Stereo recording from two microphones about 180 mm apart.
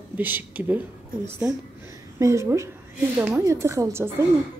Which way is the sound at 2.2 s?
15° right (ahead or behind).